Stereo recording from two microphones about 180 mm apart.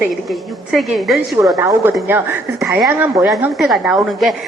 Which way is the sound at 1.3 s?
15° right (ahead or behind).